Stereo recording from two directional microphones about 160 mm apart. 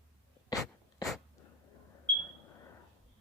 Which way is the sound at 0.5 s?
20° left (ahead or behind).